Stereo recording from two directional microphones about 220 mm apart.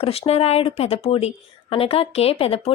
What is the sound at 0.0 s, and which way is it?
A woman's voice, 25° left (ahead or behind).